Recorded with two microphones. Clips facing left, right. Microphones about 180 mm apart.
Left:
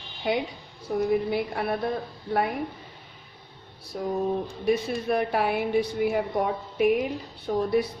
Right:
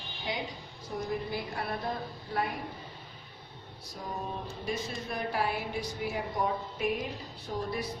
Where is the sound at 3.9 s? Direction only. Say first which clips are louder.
Left 11 dB; 65° left (ahead or behind).